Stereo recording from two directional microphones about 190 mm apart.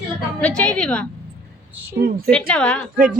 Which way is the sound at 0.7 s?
5° left (ahead or behind).